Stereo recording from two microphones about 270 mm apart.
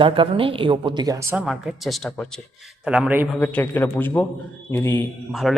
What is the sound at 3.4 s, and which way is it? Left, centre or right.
Speech, centre.